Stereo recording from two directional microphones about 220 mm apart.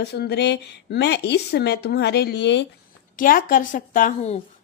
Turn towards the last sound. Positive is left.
turn(degrees=35)  # may be behind; listen again after turning